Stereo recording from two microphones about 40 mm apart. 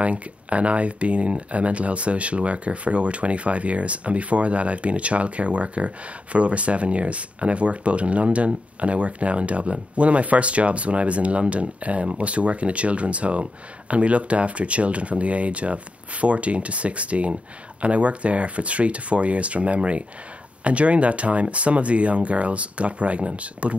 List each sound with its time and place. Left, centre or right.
0.0 s speech: right